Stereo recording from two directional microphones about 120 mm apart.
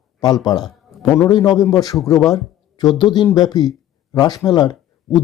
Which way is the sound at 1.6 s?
30° left (ahead or behind).